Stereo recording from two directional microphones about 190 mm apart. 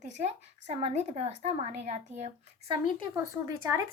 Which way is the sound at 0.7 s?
35° right (ahead or behind).